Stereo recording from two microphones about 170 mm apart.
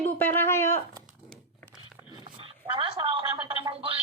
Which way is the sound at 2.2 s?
30° right (ahead or behind).